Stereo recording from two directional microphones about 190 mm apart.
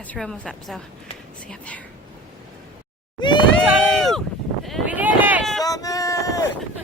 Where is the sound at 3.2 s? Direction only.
25° left (ahead or behind).